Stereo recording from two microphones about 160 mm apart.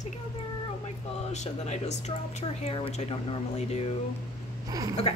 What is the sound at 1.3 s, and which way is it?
Speech, 45° left (ahead or behind).